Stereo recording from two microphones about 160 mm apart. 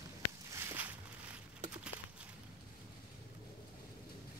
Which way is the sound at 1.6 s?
45° right (ahead or behind).